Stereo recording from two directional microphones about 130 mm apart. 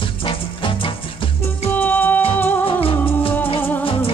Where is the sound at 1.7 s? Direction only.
15° left (ahead or behind).